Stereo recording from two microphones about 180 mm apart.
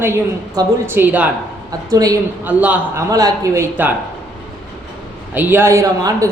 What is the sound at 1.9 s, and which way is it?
Speech, 20° right (ahead or behind).